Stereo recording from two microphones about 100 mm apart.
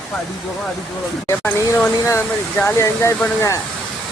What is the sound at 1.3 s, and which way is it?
Speech, 15° left (ahead or behind).